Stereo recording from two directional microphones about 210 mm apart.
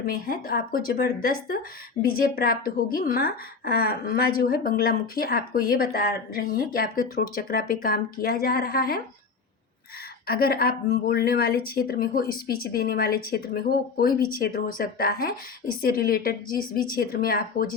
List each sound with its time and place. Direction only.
0.0 s a woman's voice: 45° left (ahead or behind)
10.2 s a woman's voice: 45° left (ahead or behind)